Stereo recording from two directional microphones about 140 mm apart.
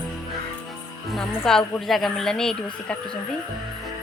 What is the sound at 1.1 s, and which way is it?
A woman's voice, 5° left (ahead or behind).